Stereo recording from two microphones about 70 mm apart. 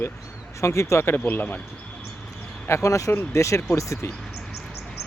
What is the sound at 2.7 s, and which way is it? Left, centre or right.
Speech, left.